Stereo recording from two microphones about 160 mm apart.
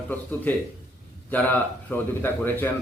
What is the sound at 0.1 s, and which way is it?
A man's voice, 10° left (ahead or behind).